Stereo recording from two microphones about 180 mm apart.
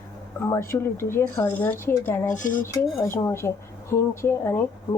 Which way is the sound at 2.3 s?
45° left (ahead or behind).